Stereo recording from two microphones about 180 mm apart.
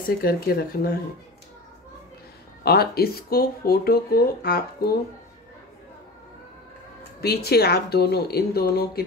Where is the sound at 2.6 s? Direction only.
60° left (ahead or behind).